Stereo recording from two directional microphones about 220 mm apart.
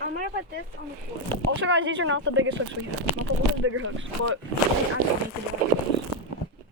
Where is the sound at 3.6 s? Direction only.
65° right (ahead or behind).